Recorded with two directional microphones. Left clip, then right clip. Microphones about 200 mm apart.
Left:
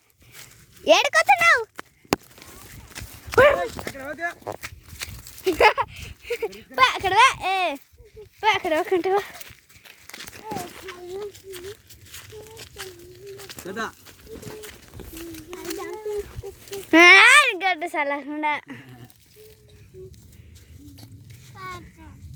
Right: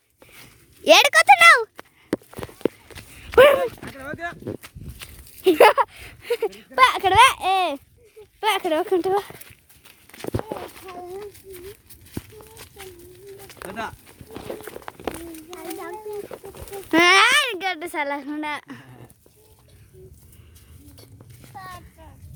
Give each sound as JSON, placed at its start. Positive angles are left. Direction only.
{"t": 0.9, "sound": "speech", "side_deg": -20}
{"t": 3.3, "sound": "walk", "side_deg": -25}
{"t": 3.9, "sound": "speech", "side_deg": 5}
{"t": 5.4, "sound": "a child's voice", "side_deg": -40}
{"t": 6.6, "sound": "a child's voice", "side_deg": -30}
{"t": 12.1, "sound": "a sound", "side_deg": 40}
{"t": 13.7, "sound": "speech", "side_deg": -25}
{"t": 16.9, "sound": "a child's voice", "side_deg": 10}